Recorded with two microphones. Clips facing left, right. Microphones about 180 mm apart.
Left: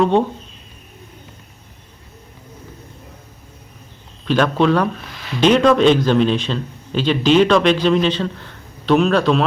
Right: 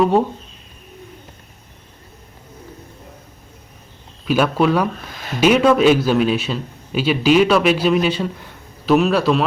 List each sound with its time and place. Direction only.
0.0 s speech: 5° right (ahead or behind)
4.3 s a man's voice: 10° right (ahead or behind)